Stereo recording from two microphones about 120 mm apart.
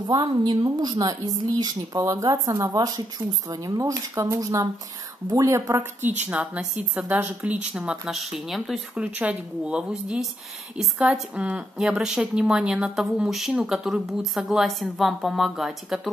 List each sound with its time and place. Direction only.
0.0 s a woman's voice: 35° right (ahead or behind); by 16.1 s centre (ahead or behind)